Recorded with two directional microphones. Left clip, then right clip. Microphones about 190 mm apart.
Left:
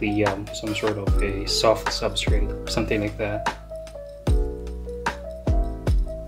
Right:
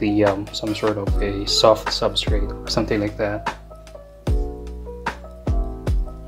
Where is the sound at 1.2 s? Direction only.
15° right (ahead or behind).